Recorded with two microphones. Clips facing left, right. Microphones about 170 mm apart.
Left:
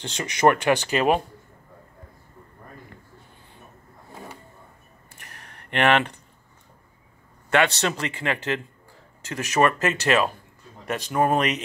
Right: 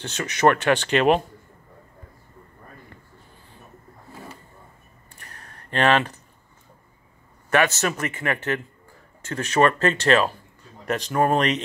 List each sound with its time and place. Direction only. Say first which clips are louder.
0.0 s speech: even; 15° left (ahead or behind)
5.7 s a man's voice: even; 20° left (ahead or behind)
7.5 s a man's voice: even; 20° left (ahead or behind)
9.3 s speech: right 2 dB; 10° left (ahead or behind)